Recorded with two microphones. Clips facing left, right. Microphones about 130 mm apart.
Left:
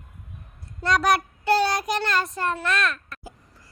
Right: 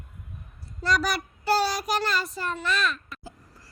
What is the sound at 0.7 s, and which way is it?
Child singing, centre (ahead or behind).